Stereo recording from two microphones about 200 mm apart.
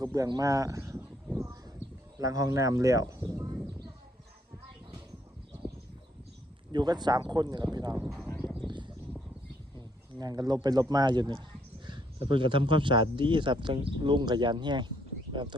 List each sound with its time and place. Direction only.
0.0 s a sound: 15° right (ahead or behind)
2.1 s speech: 15° right (ahead or behind)
6.7 s speech: 20° right (ahead or behind)
8.0 s speech: centre (ahead or behind)
8.4 s a sound: centre (ahead or behind)
10.2 s speech: 20° right (ahead or behind)